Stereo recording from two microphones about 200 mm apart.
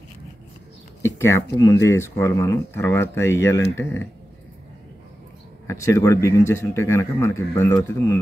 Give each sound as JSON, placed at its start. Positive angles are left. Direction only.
{"t": 1.0, "sound": "speech", "side_deg": 15}
{"t": 5.7, "sound": "speech", "side_deg": 15}